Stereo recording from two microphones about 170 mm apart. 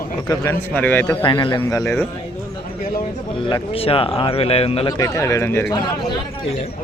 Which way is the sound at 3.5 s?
35° left (ahead or behind).